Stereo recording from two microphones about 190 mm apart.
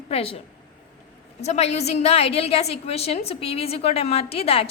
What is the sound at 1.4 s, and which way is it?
A woman's voice, 35° left (ahead or behind).